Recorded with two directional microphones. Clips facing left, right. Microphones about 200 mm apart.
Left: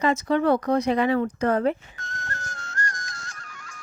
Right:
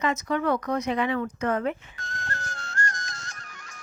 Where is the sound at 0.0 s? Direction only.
30° left (ahead or behind).